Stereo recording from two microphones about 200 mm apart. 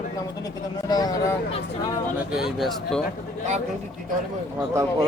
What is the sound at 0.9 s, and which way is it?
Speech, 20° left (ahead or behind).